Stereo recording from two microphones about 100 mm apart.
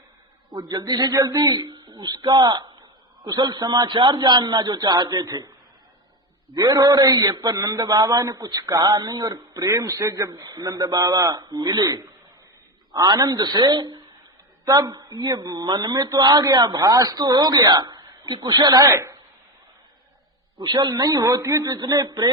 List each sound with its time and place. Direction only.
0.5 s a man's voice: 45° right (ahead or behind)
20.6 s a man's voice: 45° right (ahead or behind)